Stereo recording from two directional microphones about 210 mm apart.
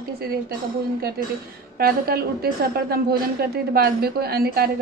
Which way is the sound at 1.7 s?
45° right (ahead or behind).